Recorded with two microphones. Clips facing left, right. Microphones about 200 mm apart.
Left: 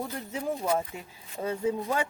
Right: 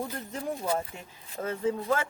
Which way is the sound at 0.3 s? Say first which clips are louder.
Left 3 dB; 5° left (ahead or behind).